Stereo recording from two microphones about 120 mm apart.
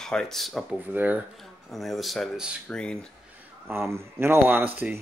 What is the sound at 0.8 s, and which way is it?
Speech, 15° right (ahead or behind).